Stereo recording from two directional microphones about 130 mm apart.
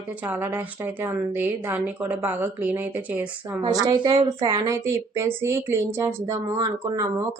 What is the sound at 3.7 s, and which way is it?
A woman's voice, 35° right (ahead or behind).